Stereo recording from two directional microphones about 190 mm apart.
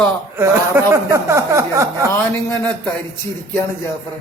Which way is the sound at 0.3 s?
15° right (ahead or behind).